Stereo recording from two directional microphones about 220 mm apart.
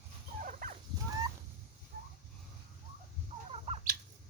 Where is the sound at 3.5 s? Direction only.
25° right (ahead or behind).